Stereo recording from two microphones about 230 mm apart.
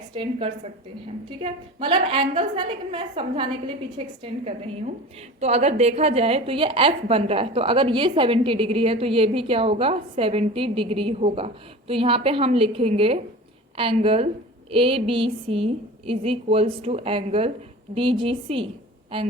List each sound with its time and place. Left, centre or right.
0.1 s a woman's voice: right